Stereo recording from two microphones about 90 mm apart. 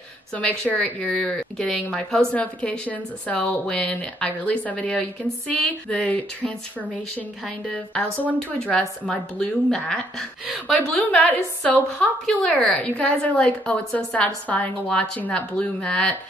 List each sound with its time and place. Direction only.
0.3 s a woman's voice: 15° left (ahead or behind)
11.2 s a woman's voice: 15° left (ahead or behind)